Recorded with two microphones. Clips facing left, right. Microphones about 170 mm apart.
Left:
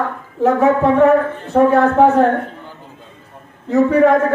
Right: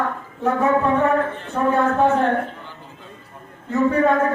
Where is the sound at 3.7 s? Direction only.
75° left (ahead or behind).